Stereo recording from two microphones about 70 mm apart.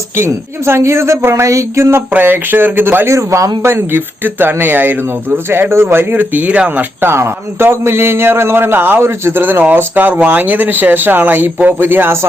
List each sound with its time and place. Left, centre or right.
0.2 s speech: right
2.1 s speech: right
3.1 s a man's voice: right
3.6 s speech: right; by 6.8 s centre
7.0 s speech: right